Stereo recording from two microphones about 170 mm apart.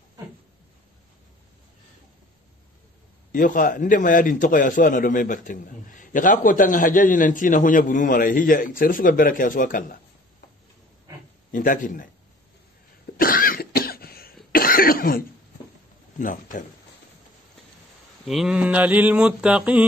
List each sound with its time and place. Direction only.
3.3 s a man's voice: 55° left (ahead or behind)
11.5 s a man's voice: 50° left (ahead or behind)
13.2 s cough: 55° left (ahead or behind)
16.2 s a man's voice: 50° left (ahead or behind)
18.2 s a sound: centre (ahead or behind)